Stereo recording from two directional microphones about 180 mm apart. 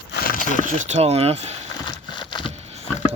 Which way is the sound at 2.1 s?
25° left (ahead or behind).